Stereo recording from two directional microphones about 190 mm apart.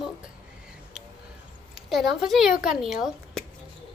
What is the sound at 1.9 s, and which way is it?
Speech, centre (ahead or behind).